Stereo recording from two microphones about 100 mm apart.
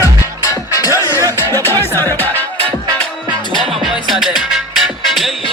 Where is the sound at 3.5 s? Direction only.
Centre (ahead or behind).